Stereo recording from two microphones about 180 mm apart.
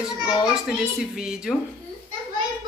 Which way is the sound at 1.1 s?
5° right (ahead or behind).